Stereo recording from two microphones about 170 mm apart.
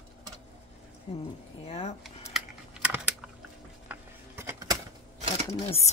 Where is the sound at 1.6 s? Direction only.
40° left (ahead or behind).